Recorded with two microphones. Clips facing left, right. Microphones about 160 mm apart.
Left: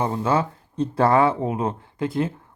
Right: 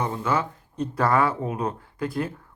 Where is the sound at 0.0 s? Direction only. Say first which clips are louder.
Left 4 dB; 30° left (ahead or behind).